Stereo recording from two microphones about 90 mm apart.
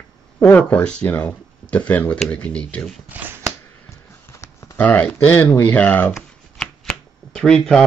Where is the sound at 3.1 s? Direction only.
20° right (ahead or behind).